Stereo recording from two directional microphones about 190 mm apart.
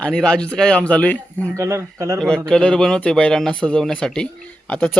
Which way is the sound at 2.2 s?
5° left (ahead or behind).